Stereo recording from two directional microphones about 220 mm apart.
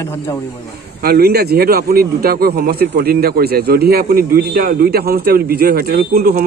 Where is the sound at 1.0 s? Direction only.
45° right (ahead or behind).